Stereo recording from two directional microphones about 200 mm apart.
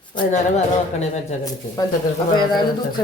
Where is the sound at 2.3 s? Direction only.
20° left (ahead or behind).